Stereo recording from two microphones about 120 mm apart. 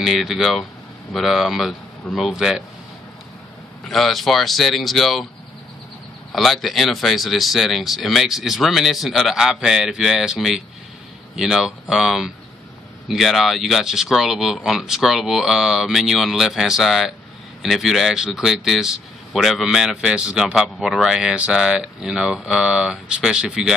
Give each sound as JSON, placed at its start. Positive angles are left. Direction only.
{"t": 0.0, "sound": "a man's voice", "side_deg": 0}
{"t": 3.8, "sound": "a man's voice", "side_deg": 0}
{"t": 6.3, "sound": "a man's voice", "side_deg": 0}